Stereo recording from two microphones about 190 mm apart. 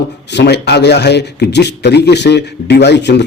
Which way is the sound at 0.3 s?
60° left (ahead or behind).